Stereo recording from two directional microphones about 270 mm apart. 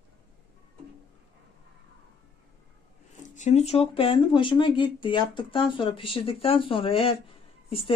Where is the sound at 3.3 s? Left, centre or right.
Left.